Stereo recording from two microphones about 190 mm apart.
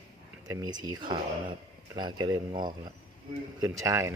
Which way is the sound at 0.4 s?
20° right (ahead or behind).